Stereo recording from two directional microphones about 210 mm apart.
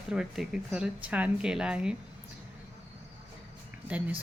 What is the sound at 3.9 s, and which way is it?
Speech, 5° right (ahead or behind).